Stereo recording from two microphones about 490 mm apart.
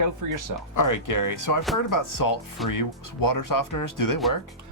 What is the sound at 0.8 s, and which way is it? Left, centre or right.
Speech, left.